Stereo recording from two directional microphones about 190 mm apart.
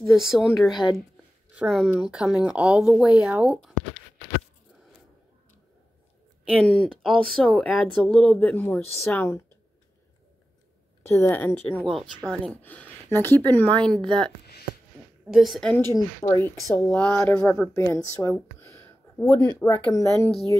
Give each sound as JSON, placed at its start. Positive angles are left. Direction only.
{"t": 0.0, "sound": "speech", "side_deg": 0}
{"t": 6.5, "sound": "speech", "side_deg": 5}
{"t": 11.0, "sound": "a woman's voice", "side_deg": 10}
{"t": 15.3, "sound": "a woman's voice", "side_deg": 0}